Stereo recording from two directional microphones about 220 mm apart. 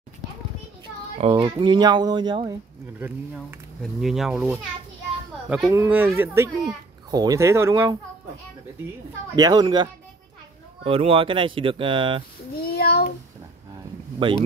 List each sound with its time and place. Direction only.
1.1 s speech: 25° right (ahead or behind)
4.0 s speech: centre (ahead or behind)
9.3 s speech: 20° right (ahead or behind)
12.6 s a child's voice: 45° left (ahead or behind)